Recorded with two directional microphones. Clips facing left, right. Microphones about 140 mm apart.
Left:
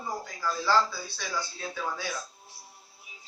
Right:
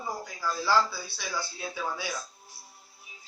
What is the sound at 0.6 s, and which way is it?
A man's voice, 10° right (ahead or behind).